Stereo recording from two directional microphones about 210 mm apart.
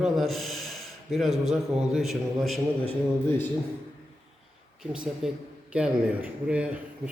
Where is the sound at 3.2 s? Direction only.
10° left (ahead or behind).